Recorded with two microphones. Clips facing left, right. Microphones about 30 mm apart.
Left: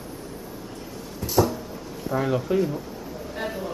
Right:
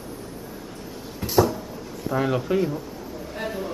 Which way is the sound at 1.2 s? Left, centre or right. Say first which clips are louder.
Right 1 dB; right.